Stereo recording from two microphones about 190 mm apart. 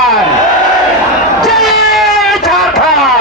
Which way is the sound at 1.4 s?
Centre (ahead or behind).